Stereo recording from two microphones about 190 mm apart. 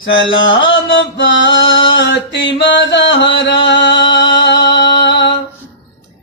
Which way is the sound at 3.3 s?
70° left (ahead or behind).